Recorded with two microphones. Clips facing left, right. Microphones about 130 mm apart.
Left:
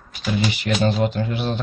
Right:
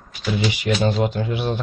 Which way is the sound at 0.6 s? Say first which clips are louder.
Right 1 dB; 20° right (ahead or behind).